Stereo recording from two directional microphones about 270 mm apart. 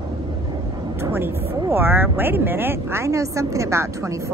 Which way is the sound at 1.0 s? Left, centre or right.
Centre.